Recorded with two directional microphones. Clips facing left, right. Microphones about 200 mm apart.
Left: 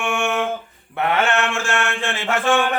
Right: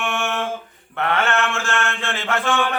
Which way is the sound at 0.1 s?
15° left (ahead or behind).